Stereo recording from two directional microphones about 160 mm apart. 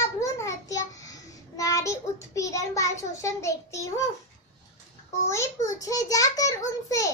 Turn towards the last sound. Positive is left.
turn(degrees=20)  # may be behind; listen again after turning